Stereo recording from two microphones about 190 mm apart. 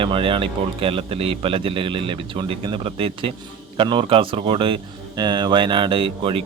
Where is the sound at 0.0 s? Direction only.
25° right (ahead or behind).